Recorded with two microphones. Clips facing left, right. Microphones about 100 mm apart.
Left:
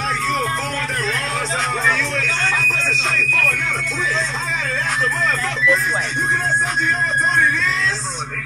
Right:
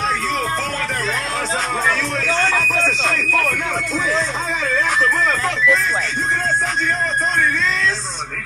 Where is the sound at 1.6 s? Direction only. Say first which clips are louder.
Left 1 dB; centre (ahead or behind).